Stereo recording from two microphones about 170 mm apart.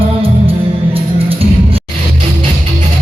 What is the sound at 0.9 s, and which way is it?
Music, 35° right (ahead or behind).